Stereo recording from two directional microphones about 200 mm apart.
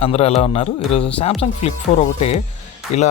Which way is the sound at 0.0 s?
30° left (ahead or behind).